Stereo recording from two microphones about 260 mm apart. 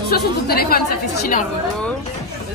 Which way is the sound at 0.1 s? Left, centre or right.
Left.